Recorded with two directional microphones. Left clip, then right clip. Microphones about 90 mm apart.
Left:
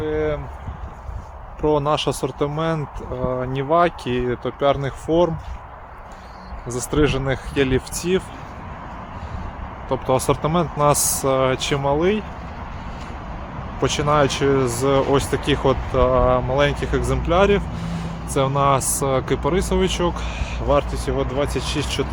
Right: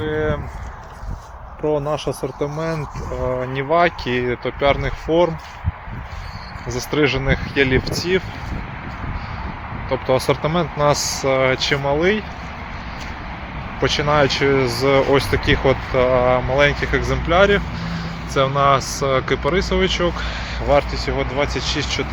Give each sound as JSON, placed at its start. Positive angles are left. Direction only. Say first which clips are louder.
{"t": 0.0, "sound": "clip-clop", "louder": "right 1 dB", "side_deg": 5}
{"t": 1.6, "sound": "speech", "louder": "left 2 dB", "side_deg": 65}
{"t": 2.4, "sound": "speech", "louder": "left 1 dB", "side_deg": 35}
{"t": 3.5, "sound": "speech", "louder": "right 1 dB", "side_deg": 55}
{"t": 6.7, "sound": "speech", "louder": "right 2 dB", "side_deg": 35}
{"t": 9.9, "sound": "speech", "louder": "right 1 dB", "side_deg": 40}
{"t": 10.9, "sound": "speech", "louder": "right 1 dB", "side_deg": 50}
{"t": 11.8, "sound": "speech", "louder": "right 1 dB", "side_deg": 35}
{"t": 13.8, "sound": "speech", "louder": "right 2 dB", "side_deg": 35}
{"t": 21.6, "sound": "speech", "louder": "right 3 dB", "side_deg": 90}